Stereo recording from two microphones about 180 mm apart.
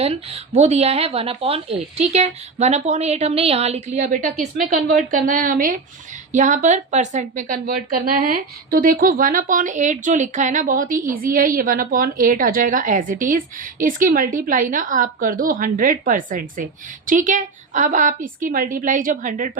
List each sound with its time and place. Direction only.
0.0 s a woman's voice: 35° right (ahead or behind)